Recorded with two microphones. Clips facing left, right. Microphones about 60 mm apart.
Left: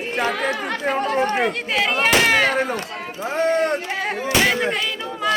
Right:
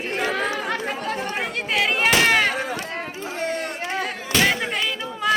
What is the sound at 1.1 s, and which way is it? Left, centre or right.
Speech, left.